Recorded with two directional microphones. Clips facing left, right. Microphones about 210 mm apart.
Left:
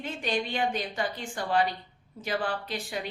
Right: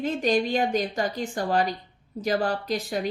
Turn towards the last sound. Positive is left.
turn(degrees=-40)  # may be behind; listen again after turning